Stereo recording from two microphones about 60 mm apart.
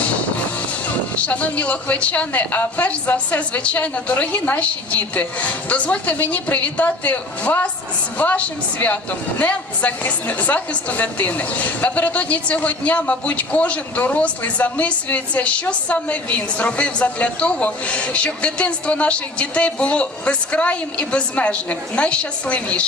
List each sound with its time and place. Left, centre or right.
1.3 s a woman's voice: left
9.4 s a woman's voice: left